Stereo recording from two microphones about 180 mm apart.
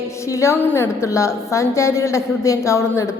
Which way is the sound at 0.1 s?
15° left (ahead or behind).